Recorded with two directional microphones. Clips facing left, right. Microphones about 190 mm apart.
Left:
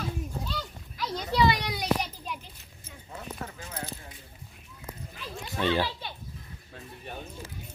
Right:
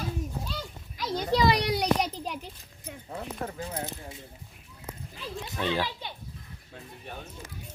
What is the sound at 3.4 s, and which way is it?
Keys jangling, 35° right (ahead or behind).